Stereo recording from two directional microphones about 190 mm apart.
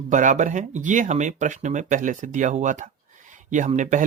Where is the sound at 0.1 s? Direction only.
40° right (ahead or behind).